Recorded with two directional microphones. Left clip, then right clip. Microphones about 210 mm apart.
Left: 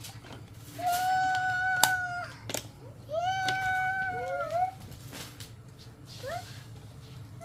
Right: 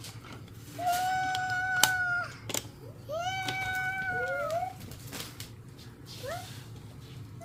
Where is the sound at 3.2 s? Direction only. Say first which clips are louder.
Left 4 dB; 20° right (ahead or behind).